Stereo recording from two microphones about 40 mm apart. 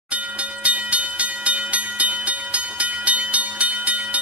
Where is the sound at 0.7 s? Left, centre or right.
Right.